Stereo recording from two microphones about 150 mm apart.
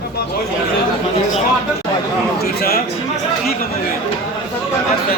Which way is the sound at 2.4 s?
90° left.